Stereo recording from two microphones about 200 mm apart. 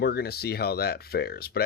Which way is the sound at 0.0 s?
55° left (ahead or behind).